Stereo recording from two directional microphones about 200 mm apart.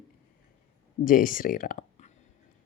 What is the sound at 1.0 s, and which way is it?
Speech, 45° left (ahead or behind).